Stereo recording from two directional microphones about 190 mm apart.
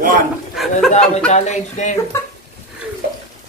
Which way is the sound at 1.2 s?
40° left (ahead or behind).